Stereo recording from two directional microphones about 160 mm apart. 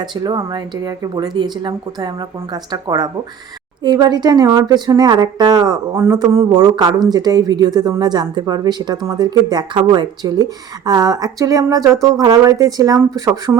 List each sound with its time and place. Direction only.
0.0 s speech: 25° right (ahead or behind)